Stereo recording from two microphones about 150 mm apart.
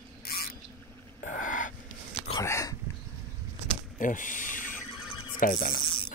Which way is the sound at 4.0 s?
60° left (ahead or behind).